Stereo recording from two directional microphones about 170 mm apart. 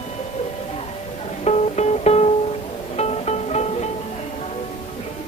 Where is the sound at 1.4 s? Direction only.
40° left (ahead or behind).